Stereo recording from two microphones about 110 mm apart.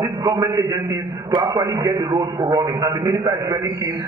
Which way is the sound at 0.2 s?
30° right (ahead or behind).